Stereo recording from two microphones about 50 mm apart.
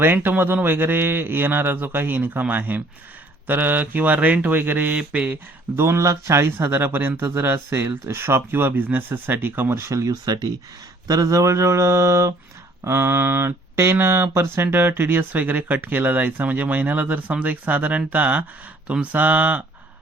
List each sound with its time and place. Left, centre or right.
0.0 s a man's voice: right
4.9 s speech: right
5.7 s speech: right
9.7 s speech: right
11.3 s mantra: right
12.8 s speech: right